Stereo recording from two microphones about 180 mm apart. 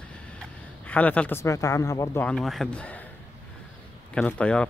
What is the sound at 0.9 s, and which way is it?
Speech, 10° left (ahead or behind).